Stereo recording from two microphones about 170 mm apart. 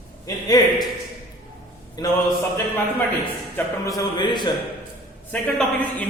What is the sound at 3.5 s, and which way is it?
Speech, 20° left (ahead or behind).